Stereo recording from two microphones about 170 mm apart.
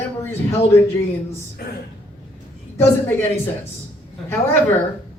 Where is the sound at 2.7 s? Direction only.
15° left (ahead or behind).